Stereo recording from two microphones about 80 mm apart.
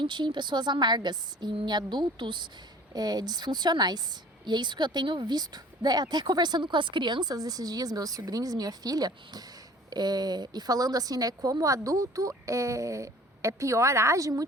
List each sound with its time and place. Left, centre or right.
0.0 s a woman's voice: right
2.9 s speech: right
4.4 s a woman's voice: right